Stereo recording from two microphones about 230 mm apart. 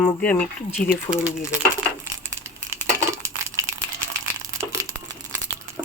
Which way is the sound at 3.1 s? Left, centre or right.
Centre.